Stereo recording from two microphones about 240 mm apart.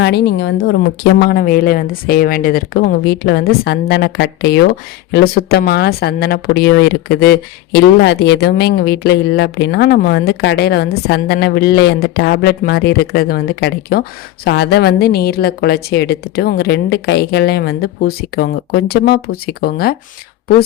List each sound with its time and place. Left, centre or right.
0.0 s speech: left